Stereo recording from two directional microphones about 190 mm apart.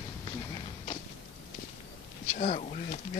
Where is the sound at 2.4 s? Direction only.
40° left (ahead or behind).